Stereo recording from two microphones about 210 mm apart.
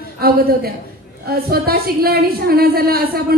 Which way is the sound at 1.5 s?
45° right (ahead or behind).